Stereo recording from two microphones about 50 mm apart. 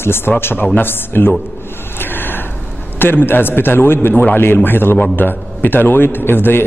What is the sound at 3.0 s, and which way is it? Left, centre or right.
A man's voice, left.